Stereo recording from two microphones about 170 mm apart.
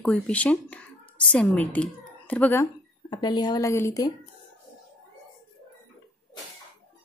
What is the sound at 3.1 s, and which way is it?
Speech, 25° left (ahead or behind).